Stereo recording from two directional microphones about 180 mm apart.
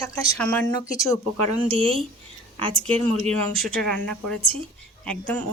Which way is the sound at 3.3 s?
Centre (ahead or behind).